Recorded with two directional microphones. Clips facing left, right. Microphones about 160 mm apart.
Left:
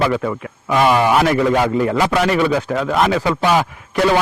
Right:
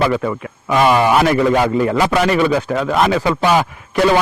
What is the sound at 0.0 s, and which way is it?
A man's voice, 20° right (ahead or behind).